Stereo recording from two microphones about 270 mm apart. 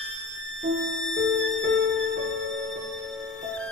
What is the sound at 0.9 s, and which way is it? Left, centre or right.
Music, right.